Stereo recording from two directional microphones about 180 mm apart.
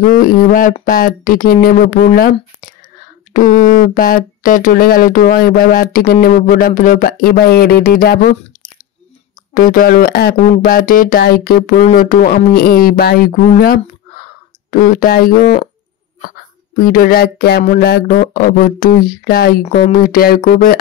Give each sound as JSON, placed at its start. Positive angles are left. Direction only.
{"t": 0.1, "sound": "speech", "side_deg": 50}
{"t": 3.3, "sound": "speech", "side_deg": 45}